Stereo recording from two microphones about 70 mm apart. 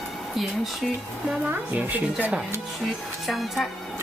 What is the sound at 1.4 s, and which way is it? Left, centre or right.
Speech, right.